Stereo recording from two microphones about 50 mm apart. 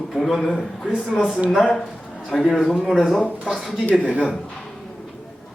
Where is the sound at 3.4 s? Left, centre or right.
Centre.